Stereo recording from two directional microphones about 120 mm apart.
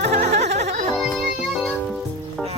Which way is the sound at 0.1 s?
65° right (ahead or behind).